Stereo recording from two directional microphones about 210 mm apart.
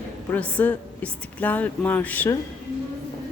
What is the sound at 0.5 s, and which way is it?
A woman's voice, 10° left (ahead or behind).